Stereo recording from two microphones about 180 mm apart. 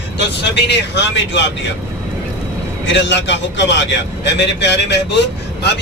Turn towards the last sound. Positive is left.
turn(degrees=70)  # may be behind; listen again after turning